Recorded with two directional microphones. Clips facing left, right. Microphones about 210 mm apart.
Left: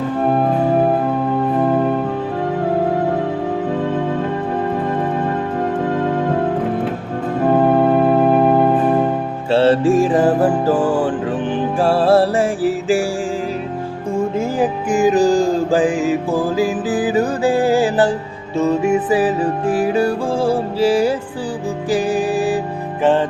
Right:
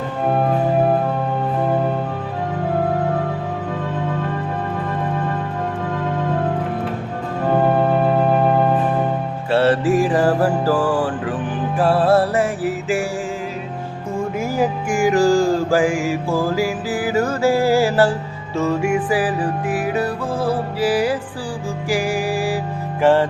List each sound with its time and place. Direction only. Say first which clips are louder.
9.5 s music: left 3 dB; 25° left (ahead or behind)
14.3 s mantra: left 2 dB; 20° left (ahead or behind)
18.5 s music: left 3 dB; 20° left (ahead or behind)